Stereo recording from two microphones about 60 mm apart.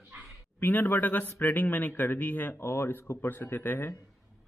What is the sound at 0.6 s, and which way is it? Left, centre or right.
A man's voice, left.